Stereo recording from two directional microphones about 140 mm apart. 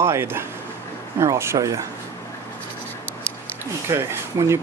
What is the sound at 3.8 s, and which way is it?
Speech, 20° right (ahead or behind).